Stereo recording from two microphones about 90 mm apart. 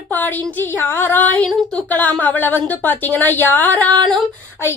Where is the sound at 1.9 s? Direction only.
20° left (ahead or behind).